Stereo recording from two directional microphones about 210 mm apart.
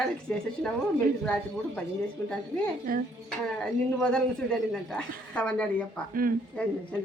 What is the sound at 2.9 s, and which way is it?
Speech, 45° right (ahead or behind).